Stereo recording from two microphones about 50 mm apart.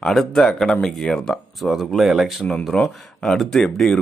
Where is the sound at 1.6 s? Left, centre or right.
Centre.